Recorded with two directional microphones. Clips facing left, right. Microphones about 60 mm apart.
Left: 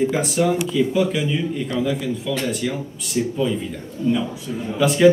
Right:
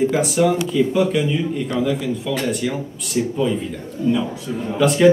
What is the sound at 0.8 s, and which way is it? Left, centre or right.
Speech, centre.